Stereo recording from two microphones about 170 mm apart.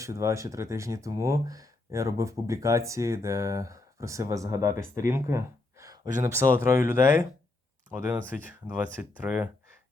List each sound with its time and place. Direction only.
0.0 s speech: 20° right (ahead or behind)